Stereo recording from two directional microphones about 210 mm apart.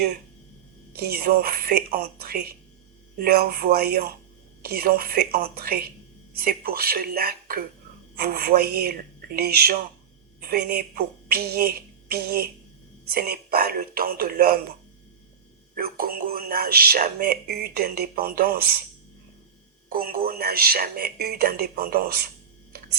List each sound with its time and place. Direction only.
0.9 s speech: 45° right (ahead or behind)
15.7 s speech: 45° right (ahead or behind)
19.9 s speech: 45° right (ahead or behind)